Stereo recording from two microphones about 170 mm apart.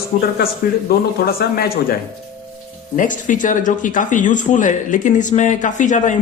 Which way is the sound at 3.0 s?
50° left (ahead or behind).